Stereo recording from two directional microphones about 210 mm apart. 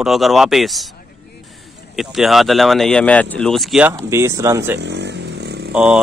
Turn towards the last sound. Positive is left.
turn(degrees=-5)  # may be behind; listen again after turning